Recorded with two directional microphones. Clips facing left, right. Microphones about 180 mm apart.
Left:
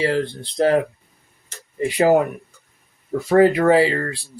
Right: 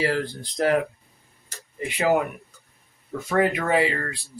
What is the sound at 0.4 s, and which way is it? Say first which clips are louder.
Speech: left 4 dB; 35° left (ahead or behind).